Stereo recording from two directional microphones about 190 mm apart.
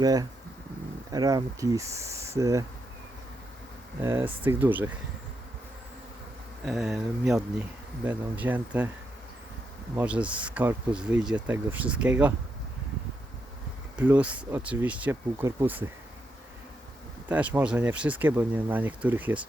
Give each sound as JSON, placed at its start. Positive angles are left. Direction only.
{"t": 0.0, "sound": "speech", "side_deg": -20}
{"t": 4.0, "sound": "speech", "side_deg": -10}
{"t": 6.7, "sound": "speech", "side_deg": 0}
{"t": 9.9, "sound": "speech", "side_deg": -10}
{"t": 13.9, "sound": "speech", "side_deg": -10}
{"t": 17.2, "sound": "speech", "side_deg": -10}